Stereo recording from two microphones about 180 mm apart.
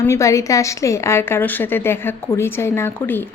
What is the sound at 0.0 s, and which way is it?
A woman's voice, 15° left (ahead or behind).